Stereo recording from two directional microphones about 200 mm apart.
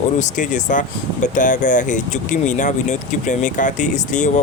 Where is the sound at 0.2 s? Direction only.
40° left (ahead or behind).